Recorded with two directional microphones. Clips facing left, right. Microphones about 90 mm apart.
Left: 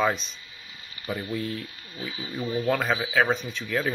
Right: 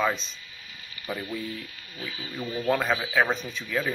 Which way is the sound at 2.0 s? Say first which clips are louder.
Left 3 dB; 15° left (ahead or behind).